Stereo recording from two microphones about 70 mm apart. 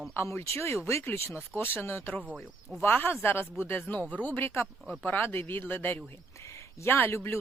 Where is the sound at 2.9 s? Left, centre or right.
Left.